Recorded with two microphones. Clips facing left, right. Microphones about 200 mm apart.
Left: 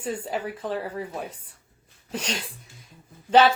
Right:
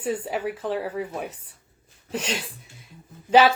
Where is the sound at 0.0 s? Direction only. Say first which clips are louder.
Right 3 dB; 5° right (ahead or behind).